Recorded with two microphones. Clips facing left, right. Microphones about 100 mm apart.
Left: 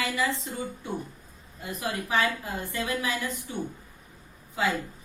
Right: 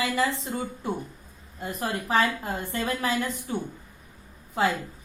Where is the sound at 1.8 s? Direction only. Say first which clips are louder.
Right 2 dB; 35° right (ahead or behind).